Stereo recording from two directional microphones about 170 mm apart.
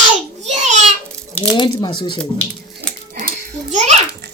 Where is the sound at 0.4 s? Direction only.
45° right (ahead or behind).